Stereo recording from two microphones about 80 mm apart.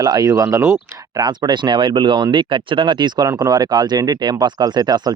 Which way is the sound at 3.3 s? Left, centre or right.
Right.